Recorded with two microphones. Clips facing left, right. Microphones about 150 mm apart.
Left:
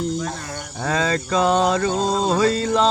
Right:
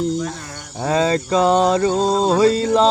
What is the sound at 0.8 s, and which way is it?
Mantra, 25° right (ahead or behind).